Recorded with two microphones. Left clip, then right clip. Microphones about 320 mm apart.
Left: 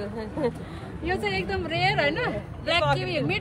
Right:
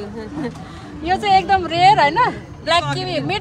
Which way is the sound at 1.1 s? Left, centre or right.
Right.